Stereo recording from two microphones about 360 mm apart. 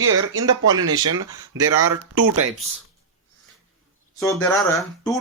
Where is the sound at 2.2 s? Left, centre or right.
Right.